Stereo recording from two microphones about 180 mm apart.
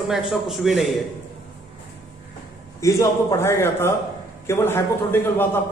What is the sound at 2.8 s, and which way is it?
A man's voice, 15° left (ahead or behind).